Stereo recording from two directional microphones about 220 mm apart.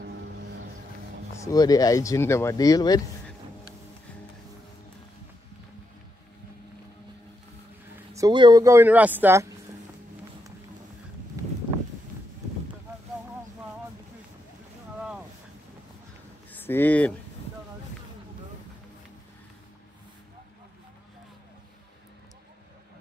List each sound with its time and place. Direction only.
1.3 s speech: 15° left (ahead or behind)
8.1 s speech: 20° right (ahead or behind)
11.4 s a sound: 15° right (ahead or behind)
15.0 s boat: 5° right (ahead or behind)
16.5 s speech: 10° left (ahead or behind)